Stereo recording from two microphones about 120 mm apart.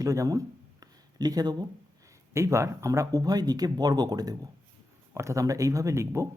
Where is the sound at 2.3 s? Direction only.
25° right (ahead or behind).